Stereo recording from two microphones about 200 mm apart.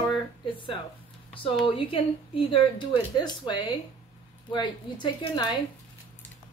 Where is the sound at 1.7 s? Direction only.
25° left (ahead or behind).